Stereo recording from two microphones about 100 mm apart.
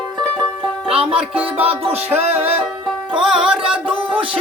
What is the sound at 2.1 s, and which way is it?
Music, 90° right.